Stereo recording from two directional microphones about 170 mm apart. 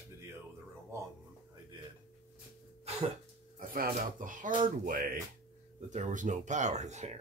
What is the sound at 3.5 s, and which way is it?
Speech, 55° right (ahead or behind).